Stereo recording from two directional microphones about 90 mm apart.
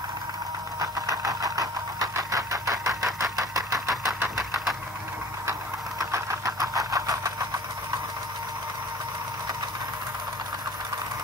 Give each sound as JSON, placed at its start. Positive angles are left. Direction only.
{"t": 0.7, "sound": "engine", "side_deg": -40}
{"t": 4.4, "sound": "engine", "side_deg": -5}
{"t": 5.5, "sound": "engine", "side_deg": -35}